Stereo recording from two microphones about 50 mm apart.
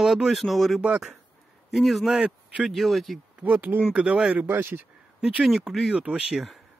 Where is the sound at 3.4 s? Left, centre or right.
Right.